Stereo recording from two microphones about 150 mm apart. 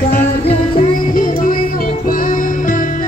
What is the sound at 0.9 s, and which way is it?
Music, 65° left (ahead or behind).